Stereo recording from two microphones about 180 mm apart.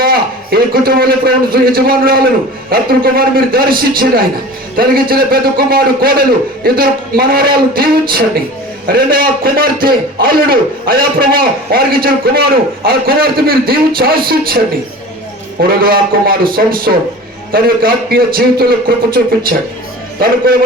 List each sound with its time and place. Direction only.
0.0 s a man's voice: 55° right (ahead or behind)
15.6 s a man's voice: 55° right (ahead or behind)